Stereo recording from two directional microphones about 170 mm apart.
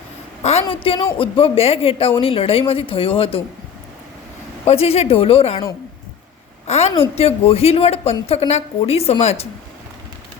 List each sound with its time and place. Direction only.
0.6 s a woman's voice: 30° left (ahead or behind)
4.6 s a woman's voice: 35° left (ahead or behind)
6.7 s a woman's voice: 40° left (ahead or behind)